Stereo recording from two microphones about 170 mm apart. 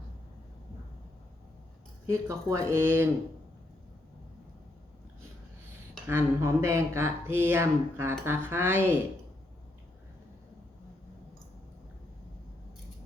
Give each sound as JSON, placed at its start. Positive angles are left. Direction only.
{"t": 2.0, "sound": "speech", "side_deg": -20}
{"t": 6.1, "sound": "speech", "side_deg": -15}